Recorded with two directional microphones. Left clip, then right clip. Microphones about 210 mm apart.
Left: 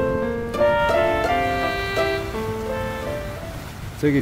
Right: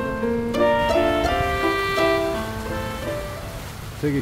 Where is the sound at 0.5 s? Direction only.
Centre (ahead or behind).